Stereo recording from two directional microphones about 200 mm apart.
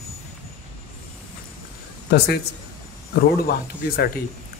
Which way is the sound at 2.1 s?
50° left (ahead or behind).